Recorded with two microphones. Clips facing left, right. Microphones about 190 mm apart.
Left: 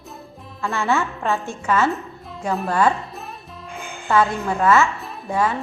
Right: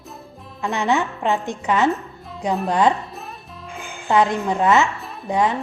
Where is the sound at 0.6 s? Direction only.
20° right (ahead or behind).